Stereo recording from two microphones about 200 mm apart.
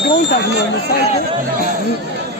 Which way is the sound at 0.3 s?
60° left (ahead or behind).